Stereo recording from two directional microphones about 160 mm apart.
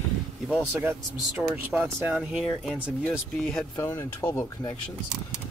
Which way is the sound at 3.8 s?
20° left (ahead or behind).